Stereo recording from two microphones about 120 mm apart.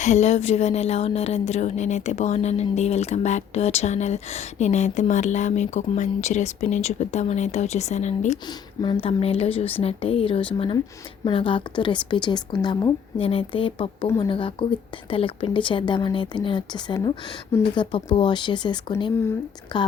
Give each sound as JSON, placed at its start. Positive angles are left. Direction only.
{"t": 0.0, "sound": "speech", "side_deg": 70}
{"t": 8.8, "sound": "a woman's voice", "side_deg": 40}
{"t": 9.0, "sound": "a woman's voice", "side_deg": 55}